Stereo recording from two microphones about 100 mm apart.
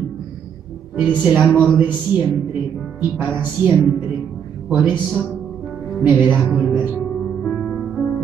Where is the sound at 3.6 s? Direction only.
20° right (ahead or behind).